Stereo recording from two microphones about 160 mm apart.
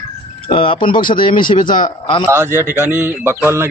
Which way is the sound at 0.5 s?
35° left (ahead or behind).